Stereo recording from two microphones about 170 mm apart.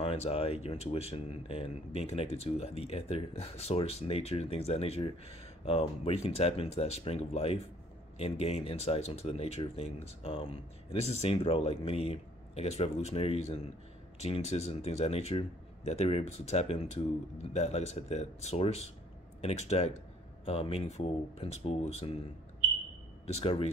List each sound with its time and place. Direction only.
0.0 s speech: 35° left (ahead or behind)
23.2 s speech: 35° left (ahead or behind)